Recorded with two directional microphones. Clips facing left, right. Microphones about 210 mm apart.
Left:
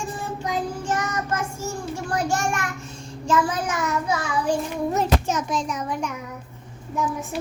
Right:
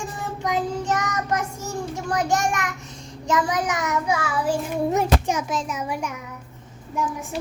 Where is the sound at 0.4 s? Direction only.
20° right (ahead or behind).